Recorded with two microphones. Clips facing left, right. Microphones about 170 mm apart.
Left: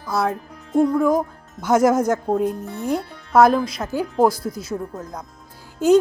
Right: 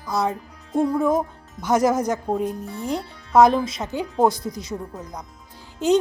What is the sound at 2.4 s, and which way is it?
Speech, 50° left (ahead or behind).